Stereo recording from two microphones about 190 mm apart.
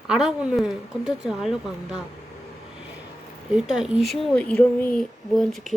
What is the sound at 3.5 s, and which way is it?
Speech, 5° right (ahead or behind).